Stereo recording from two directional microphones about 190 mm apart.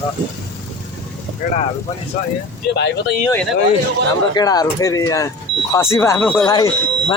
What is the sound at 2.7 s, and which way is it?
Speech, 65° left (ahead or behind).